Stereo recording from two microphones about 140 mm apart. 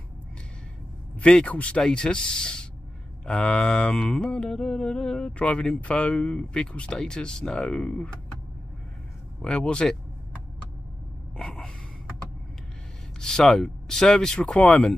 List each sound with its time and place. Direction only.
1.2 s speech: 5° left (ahead or behind)
3.3 s mantra: 5° left (ahead or behind)
9.4 s speech: 5° left (ahead or behind)
11.3 s mantra: 5° left (ahead or behind)
13.2 s speech: 5° left (ahead or behind)